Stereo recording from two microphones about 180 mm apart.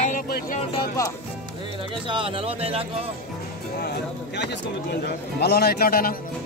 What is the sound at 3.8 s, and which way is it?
Music, 65° left (ahead or behind).